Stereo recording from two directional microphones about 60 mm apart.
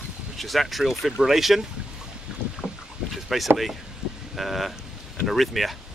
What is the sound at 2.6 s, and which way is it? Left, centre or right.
Boat, left.